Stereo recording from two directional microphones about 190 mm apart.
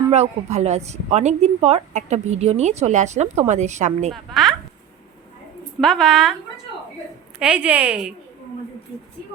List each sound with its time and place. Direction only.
0.1 s a woman's voice: 35° right (ahead or behind)
4.1 s a woman's voice: centre (ahead or behind)
5.8 s a woman's voice: centre (ahead or behind)
7.3 s a woman's voice: 5° right (ahead or behind)